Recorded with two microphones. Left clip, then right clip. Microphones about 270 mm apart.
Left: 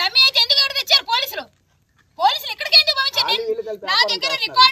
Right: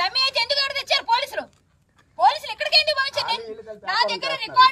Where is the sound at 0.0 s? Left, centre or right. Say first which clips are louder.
Left 6 dB; centre.